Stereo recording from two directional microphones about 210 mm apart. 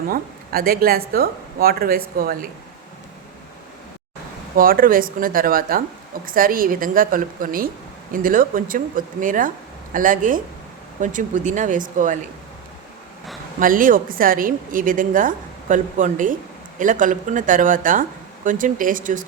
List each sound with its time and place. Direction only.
0.1 s a woman's voice: 45° right (ahead or behind)
4.5 s a woman's voice: 45° right (ahead or behind)
13.6 s a woman's voice: 40° right (ahead or behind)